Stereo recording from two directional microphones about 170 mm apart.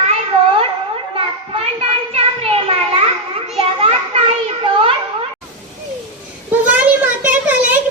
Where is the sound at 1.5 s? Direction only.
35° right (ahead or behind).